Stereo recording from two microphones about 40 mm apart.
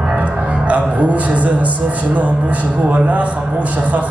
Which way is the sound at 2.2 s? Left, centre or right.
Right.